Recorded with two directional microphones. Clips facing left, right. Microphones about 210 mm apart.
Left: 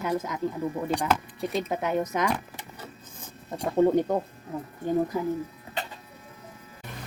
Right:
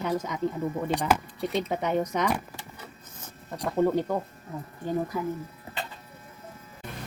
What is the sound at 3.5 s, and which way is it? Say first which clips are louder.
Speech: left 3 dB; 25° left (ahead or behind).